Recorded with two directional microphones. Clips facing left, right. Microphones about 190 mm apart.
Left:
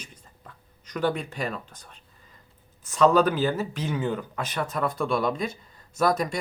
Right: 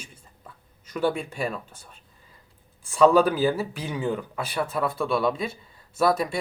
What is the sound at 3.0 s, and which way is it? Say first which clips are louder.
Speech: right 2 dB; 10° right (ahead or behind).